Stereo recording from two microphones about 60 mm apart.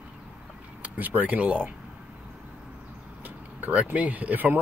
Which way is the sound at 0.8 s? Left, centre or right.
Right.